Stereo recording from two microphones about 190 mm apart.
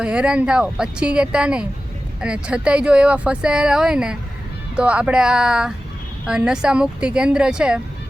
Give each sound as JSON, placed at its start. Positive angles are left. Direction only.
{"t": 0.0, "sound": "speech", "side_deg": -5}